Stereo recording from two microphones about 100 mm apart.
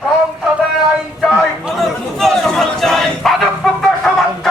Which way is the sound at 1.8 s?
5° left (ahead or behind).